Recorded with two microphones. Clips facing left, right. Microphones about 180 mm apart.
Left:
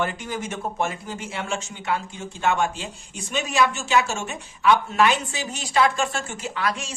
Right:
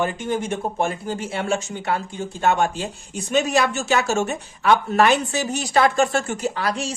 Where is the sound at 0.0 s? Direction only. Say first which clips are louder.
Right 4 dB; 25° right (ahead or behind).